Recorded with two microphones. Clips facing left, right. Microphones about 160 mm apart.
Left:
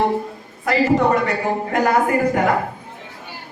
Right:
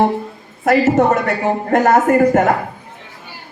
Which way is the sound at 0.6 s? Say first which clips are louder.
Right 4 dB; 50° right (ahead or behind).